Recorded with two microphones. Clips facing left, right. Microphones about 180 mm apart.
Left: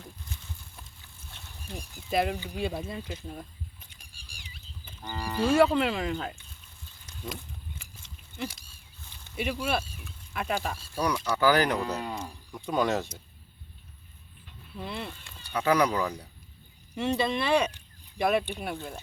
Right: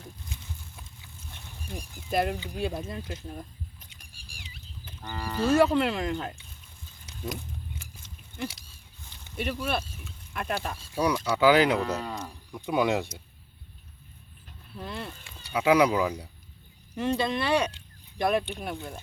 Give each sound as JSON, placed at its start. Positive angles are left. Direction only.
{"t": 1.7, "sound": "speech", "side_deg": 0}
{"t": 5.0, "sound": "speech", "side_deg": 10}
{"t": 9.3, "sound": "speech", "side_deg": 5}
{"t": 10.9, "sound": "speech", "side_deg": -10}
{"t": 11.8, "sound": "speech", "side_deg": 15}
{"t": 12.5, "sound": "a sound", "side_deg": -5}
{"t": 12.7, "sound": "speech", "side_deg": -15}
{"t": 14.8, "sound": "speech", "side_deg": 10}
{"t": 15.4, "sound": "speech", "side_deg": -10}
{"t": 16.9, "sound": "speech", "side_deg": 10}